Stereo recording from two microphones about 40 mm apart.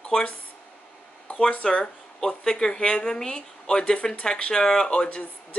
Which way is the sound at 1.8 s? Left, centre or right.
Centre.